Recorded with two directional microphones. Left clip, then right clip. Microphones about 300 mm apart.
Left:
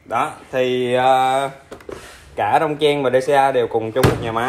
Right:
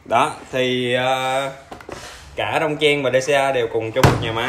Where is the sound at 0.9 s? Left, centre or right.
Centre.